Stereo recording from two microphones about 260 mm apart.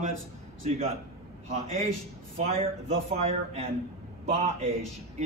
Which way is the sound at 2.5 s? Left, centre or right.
Right.